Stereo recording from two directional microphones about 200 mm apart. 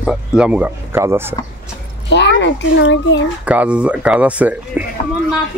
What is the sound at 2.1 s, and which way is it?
A child's voice, 60° left (ahead or behind).